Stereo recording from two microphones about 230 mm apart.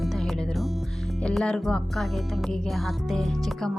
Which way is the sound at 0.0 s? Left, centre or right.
Centre.